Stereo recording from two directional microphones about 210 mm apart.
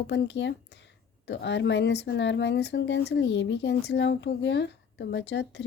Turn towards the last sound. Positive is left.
turn(degrees=55)  # may be behind; listen again after turning